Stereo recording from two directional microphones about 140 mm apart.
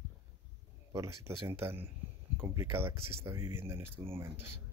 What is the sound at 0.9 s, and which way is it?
Speech, 20° right (ahead or behind).